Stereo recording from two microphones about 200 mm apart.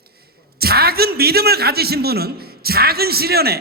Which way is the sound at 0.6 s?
50° right (ahead or behind).